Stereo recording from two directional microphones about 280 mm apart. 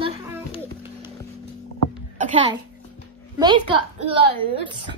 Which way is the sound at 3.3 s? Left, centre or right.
Centre.